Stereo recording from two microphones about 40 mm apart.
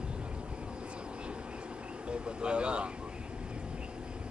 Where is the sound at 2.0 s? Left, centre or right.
Right.